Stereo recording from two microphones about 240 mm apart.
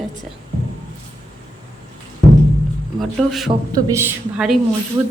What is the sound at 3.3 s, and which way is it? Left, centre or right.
A woman's voice, centre.